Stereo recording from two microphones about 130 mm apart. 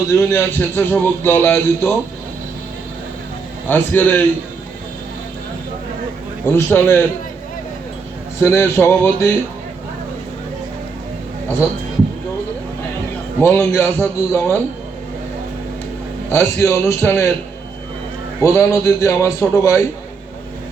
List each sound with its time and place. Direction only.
0.2 s a man's voice: 20° left (ahead or behind)
3.7 s a man's voice: 15° left (ahead or behind)
6.4 s a man's voice: 15° left (ahead or behind)
8.4 s a man's voice: 20° left (ahead or behind)
13.4 s a man's voice: 20° left (ahead or behind)
16.3 s a man's voice: 20° left (ahead or behind)
18.4 s a man's voice: 20° left (ahead or behind)